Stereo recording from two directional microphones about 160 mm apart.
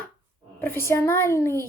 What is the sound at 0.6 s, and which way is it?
Speech, 15° left (ahead or behind).